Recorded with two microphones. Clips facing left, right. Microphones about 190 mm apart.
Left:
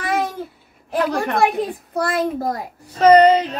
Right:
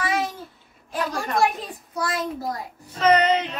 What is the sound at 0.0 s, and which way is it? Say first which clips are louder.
Babbling: left 3 dB; 55° left (ahead or behind).